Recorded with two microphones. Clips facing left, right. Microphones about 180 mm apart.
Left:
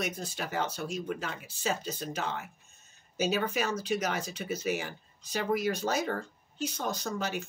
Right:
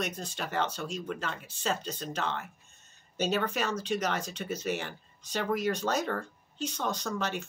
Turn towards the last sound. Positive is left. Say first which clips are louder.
# even
turn(degrees=5)  # may be behind; listen again after turning